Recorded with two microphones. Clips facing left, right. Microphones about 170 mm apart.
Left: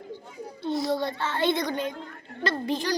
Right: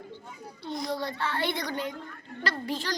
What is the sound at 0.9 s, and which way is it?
A child's voice, 25° left (ahead or behind).